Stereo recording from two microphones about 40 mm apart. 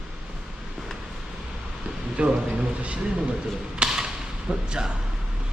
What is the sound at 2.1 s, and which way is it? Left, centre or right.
Speech, right.